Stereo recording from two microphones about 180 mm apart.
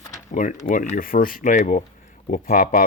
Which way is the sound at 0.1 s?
45° left (ahead or behind).